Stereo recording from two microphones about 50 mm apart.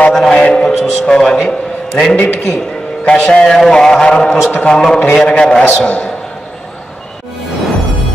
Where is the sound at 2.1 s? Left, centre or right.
Left.